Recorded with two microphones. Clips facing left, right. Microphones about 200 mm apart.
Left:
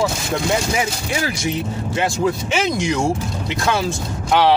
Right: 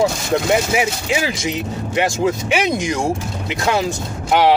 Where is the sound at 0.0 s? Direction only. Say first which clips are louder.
Right 3 dB; 15° right (ahead or behind).